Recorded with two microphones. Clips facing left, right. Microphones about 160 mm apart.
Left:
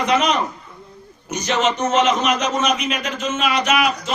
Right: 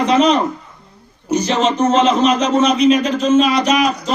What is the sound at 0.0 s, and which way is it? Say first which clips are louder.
A man's voice: right 5 dB; 30° right (ahead or behind).